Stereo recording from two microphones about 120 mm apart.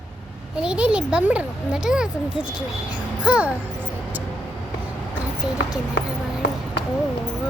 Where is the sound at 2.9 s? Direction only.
10° right (ahead or behind).